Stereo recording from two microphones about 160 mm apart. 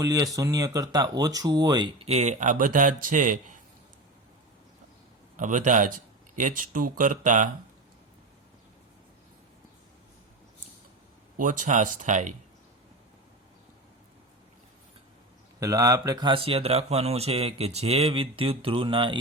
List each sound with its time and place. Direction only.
0.0 s speech: 20° right (ahead or behind)
2.0 s speech: 45° right (ahead or behind)
5.4 s speech: 55° right (ahead or behind)
11.3 s speech: 55° right (ahead or behind)
15.6 s speech: 20° right (ahead or behind)